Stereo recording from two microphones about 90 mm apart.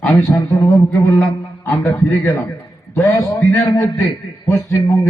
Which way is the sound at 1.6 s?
35° left (ahead or behind).